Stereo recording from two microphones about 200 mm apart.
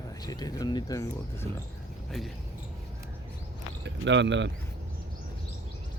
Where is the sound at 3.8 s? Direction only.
65° right (ahead or behind).